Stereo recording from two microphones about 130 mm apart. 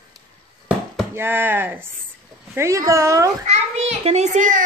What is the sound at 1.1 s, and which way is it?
Speech, 15° right (ahead or behind).